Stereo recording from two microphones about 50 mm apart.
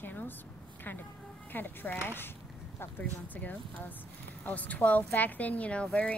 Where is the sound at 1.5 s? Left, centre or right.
Left.